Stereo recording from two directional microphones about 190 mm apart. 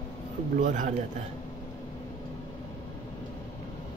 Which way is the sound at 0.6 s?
40° right (ahead or behind).